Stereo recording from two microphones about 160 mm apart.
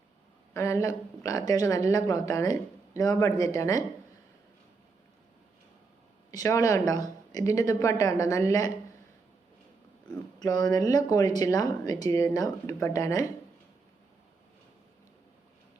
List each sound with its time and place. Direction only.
0.5 s a woman's voice: 20° left (ahead or behind)
6.3 s a woman's voice: 20° left (ahead or behind)
10.4 s a woman's voice: 25° left (ahead or behind)